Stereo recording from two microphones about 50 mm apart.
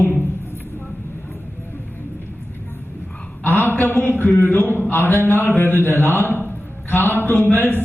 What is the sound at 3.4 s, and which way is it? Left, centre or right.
Speech, left.